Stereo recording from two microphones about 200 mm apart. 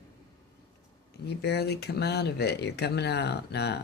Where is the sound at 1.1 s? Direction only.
55° left (ahead or behind).